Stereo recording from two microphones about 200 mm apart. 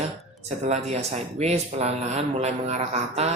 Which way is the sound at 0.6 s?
35° right (ahead or behind).